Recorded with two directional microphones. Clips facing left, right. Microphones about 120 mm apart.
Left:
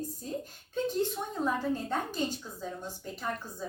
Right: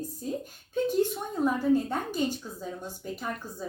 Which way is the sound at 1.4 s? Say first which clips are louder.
Right 7 dB; 10° right (ahead or behind).